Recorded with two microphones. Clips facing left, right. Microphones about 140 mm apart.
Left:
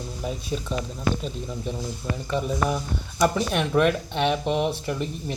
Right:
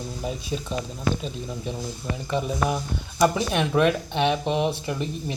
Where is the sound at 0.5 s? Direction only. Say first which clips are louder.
Left 1 dB; centre (ahead or behind).